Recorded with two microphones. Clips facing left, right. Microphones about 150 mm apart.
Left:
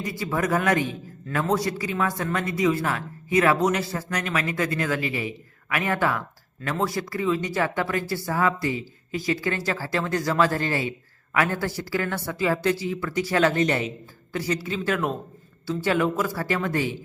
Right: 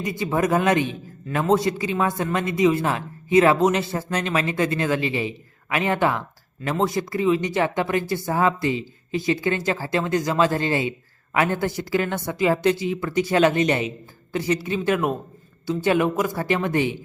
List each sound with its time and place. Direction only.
0.0 s a man's voice: 20° right (ahead or behind)